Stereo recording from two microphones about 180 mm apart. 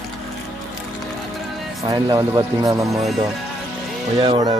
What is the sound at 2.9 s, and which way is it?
Speech, centre (ahead or behind).